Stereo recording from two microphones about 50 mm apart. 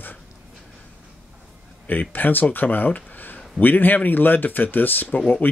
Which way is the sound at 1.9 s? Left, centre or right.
Left.